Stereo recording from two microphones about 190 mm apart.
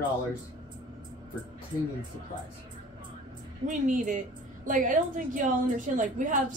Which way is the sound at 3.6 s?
40° right (ahead or behind).